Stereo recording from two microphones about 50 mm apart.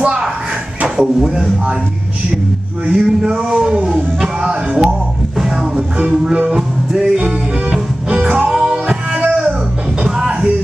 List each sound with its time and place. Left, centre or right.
0.0 s a sound: centre
1.0 s music: centre
2.9 s music: centre
8.2 s music: right
8.5 s music: centre